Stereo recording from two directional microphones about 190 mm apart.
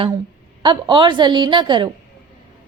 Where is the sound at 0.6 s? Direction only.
25° right (ahead or behind).